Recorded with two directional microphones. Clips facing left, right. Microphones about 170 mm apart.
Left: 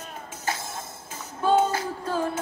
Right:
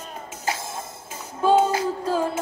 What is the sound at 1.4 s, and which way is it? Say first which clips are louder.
Music: right 3 dB; 15° right (ahead or behind).